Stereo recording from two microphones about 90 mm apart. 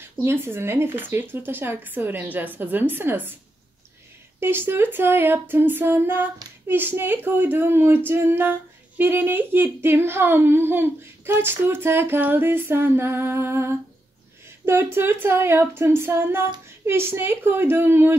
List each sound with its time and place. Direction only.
0.0 s speech: 25° right (ahead or behind)
4.4 s speech: 25° right (ahead or behind)